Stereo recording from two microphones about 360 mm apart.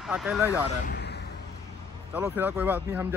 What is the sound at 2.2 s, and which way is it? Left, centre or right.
Speech, centre.